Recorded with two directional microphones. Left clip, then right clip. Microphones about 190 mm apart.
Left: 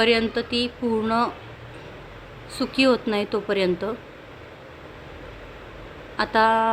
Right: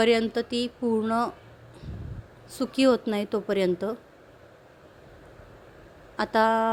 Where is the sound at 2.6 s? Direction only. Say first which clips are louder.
Left 2 dB; 45° right (ahead or behind).